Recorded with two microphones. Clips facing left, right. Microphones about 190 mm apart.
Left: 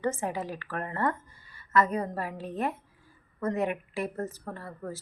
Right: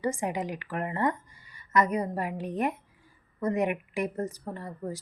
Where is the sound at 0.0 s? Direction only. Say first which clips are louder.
Right 1 dB; 15° right (ahead or behind).